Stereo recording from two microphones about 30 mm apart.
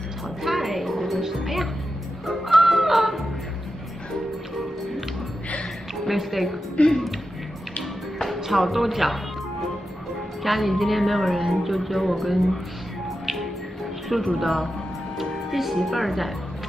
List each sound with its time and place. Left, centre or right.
0.4 s music: centre
6.0 s a woman's voice: centre
6.8 s speech: left
8.5 s a woman's voice: centre
13.2 s music: centre
14.0 s a woman's voice: centre
15.1 s music: centre